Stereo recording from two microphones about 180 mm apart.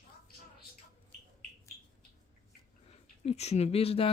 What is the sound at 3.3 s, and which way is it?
Speech, 35° left (ahead or behind).